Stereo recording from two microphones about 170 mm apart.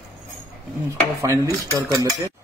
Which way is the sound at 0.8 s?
20° right (ahead or behind).